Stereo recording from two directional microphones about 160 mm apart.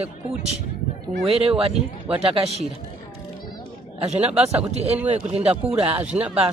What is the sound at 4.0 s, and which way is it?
Speech, 40° right (ahead or behind).